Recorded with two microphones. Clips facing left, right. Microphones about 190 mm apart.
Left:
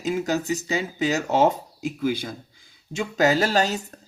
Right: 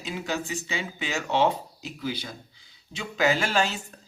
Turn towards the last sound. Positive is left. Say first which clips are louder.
# left 4 dB
turn(degrees=40)  # may be behind; listen again after turning